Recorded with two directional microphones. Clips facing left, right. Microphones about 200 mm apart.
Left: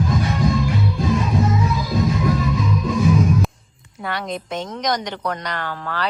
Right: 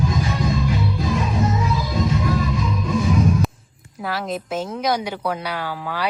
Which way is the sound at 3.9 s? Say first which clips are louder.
Right 1 dB; centre (ahead or behind).